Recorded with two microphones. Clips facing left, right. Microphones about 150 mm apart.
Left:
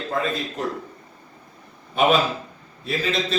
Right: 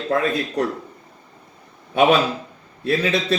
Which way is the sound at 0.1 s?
65° right (ahead or behind).